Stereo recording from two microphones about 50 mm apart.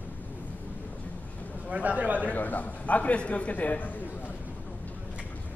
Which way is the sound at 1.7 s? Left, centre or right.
Right.